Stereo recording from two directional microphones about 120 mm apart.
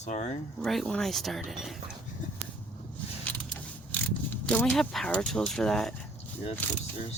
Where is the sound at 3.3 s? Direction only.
15° left (ahead or behind).